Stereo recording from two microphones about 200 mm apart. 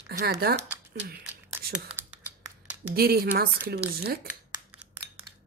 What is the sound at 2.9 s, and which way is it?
Speech, 50° right (ahead or behind).